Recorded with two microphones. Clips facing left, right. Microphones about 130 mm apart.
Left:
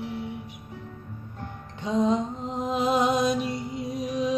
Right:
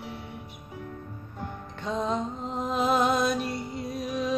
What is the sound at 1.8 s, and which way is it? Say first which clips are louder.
Music: left 5 dB; 15° left (ahead or behind).